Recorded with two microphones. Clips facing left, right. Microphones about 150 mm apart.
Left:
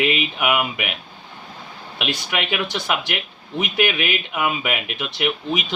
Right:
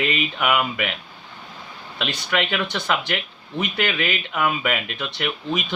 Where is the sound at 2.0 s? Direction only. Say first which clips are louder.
Right 1 dB; 15° left (ahead or behind).